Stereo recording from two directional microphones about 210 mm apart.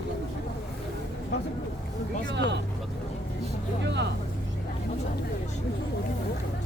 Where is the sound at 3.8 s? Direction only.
55° right (ahead or behind).